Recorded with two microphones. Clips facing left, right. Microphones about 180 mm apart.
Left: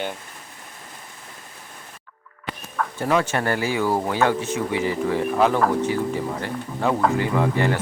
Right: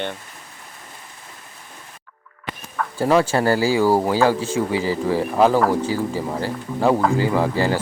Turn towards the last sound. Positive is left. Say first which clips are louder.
# right 2 dB
turn(degrees=-30)  # may be behind; listen again after turning